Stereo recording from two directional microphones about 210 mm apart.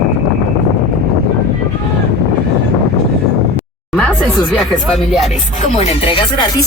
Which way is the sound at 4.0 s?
5° left (ahead or behind).